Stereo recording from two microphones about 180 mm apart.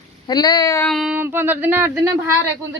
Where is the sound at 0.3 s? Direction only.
20° left (ahead or behind).